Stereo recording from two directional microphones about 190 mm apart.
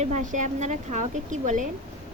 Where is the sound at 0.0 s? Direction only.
40° right (ahead or behind).